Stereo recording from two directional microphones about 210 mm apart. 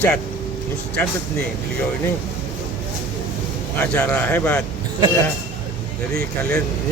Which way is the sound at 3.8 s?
10° left (ahead or behind).